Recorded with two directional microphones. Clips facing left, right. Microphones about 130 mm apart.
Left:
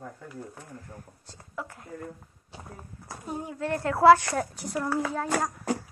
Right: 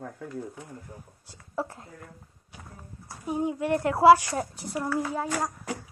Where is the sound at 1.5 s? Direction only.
30° right (ahead or behind).